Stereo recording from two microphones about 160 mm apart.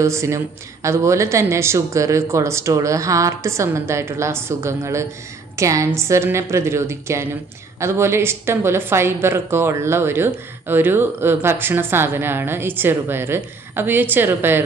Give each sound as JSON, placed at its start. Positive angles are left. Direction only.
{"t": 0.0, "sound": "speech", "side_deg": -15}